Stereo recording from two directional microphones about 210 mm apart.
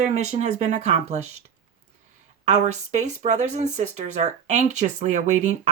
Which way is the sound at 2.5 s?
35° right (ahead or behind).